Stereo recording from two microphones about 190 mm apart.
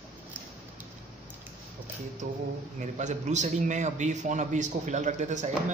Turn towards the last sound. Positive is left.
turn(degrees=-40)  # may be behind; listen again after turning